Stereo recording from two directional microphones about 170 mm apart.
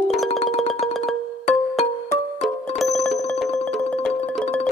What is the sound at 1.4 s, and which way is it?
Music, 40° left (ahead or behind).